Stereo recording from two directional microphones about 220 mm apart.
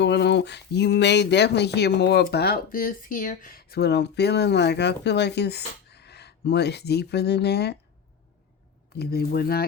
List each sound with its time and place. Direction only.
0.0 s speech: 50° left (ahead or behind)
9.0 s speech: 45° left (ahead or behind)